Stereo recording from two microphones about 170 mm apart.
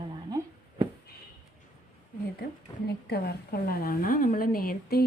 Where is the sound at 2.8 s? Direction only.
70° left (ahead or behind).